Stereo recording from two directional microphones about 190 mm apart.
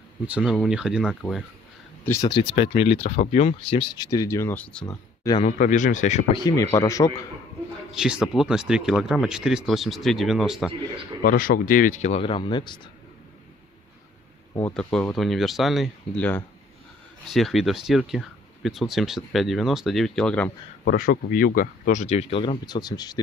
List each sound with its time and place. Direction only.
0.3 s speech: 5° right (ahead or behind)
2.0 s speech: 15° left (ahead or behind)
2.3 s speech: 30° left (ahead or behind)
3.9 s speech: 20° left (ahead or behind)
4.8 s speech: 20° left (ahead or behind)
5.4 s speech: 40° left (ahead or behind)
6.3 s speech: 20° left (ahead or behind)
7.9 s speech: 5° right (ahead or behind)
11.2 s speech: 50° left (ahead or behind); by 12.8 s 25° left (ahead or behind)
14.7 s speech: 5° left (ahead or behind)
20.8 s speech: 50° left (ahead or behind); by 23.1 s 20° left (ahead or behind)